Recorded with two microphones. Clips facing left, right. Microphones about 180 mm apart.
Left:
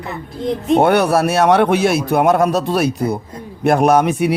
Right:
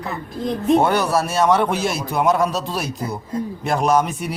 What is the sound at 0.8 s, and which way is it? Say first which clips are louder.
A man's voice: left 5 dB; 65° left (ahead or behind).